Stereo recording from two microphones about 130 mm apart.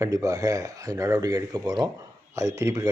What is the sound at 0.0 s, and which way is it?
Speech, 25° right (ahead or behind).